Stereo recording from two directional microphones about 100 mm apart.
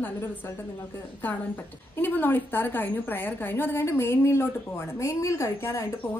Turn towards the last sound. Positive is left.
turn(degrees=30)  # may be behind; listen again after turning